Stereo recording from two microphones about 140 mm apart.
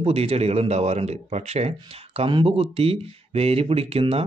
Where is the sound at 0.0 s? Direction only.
45° right (ahead or behind).